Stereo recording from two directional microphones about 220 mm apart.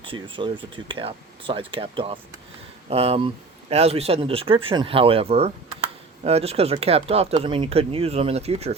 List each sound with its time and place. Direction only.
0.0 s speech: 25° right (ahead or behind)